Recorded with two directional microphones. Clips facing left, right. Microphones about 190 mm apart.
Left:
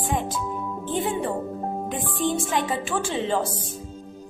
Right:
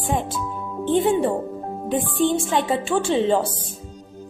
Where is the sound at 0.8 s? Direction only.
25° right (ahead or behind).